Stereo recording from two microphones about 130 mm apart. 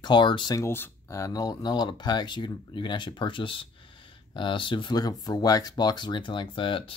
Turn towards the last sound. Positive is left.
turn(degrees=40)  # may be behind; listen again after turning